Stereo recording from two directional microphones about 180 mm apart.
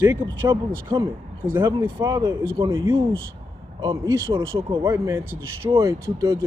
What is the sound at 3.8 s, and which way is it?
Speech, 20° right (ahead or behind).